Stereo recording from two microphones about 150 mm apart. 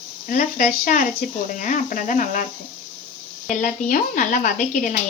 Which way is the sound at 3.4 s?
55° left (ahead or behind).